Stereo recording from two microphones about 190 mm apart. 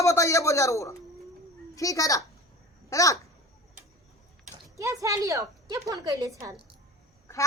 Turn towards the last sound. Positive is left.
turn(degrees=-15)  # may be behind; listen again after turning